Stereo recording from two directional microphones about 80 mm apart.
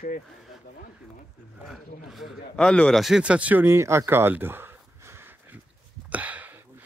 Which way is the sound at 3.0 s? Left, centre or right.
Centre.